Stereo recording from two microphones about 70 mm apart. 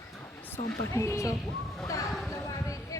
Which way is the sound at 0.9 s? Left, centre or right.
Left.